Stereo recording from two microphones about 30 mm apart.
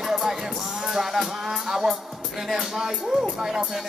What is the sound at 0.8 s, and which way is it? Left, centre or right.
Music, centre.